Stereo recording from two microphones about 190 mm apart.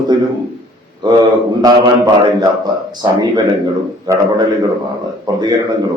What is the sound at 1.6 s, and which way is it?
A man's voice, 20° right (ahead or behind).